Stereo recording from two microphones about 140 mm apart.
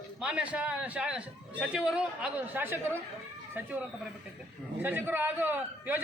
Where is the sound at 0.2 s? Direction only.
5° right (ahead or behind).